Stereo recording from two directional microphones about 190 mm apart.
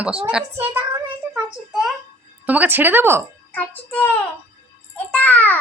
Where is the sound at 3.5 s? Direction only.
10° left (ahead or behind).